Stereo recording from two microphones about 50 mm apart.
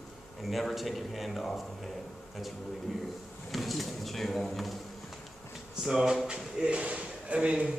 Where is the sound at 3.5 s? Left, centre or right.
Centre.